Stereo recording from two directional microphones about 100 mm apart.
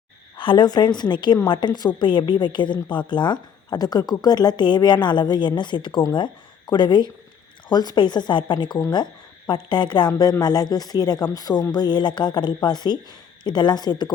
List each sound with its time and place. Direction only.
0.3 s a woman's voice: 55° left (ahead or behind)